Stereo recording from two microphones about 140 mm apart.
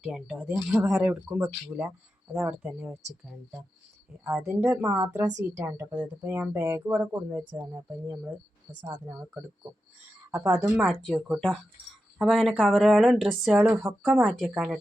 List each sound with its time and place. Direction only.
0.0 s speech: centre (ahead or behind)
4.2 s speech: 5° right (ahead or behind)
4.8 s a woman's voice: 25° right (ahead or behind)
12.2 s speech: centre (ahead or behind)